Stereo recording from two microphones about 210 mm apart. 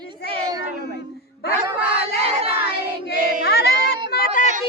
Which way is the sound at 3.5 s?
50° left (ahead or behind).